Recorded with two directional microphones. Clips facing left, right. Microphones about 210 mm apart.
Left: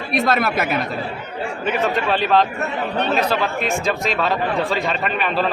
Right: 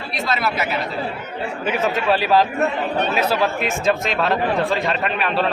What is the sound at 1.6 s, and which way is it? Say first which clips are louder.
Speech: right 1 dB; 5° right (ahead or behind).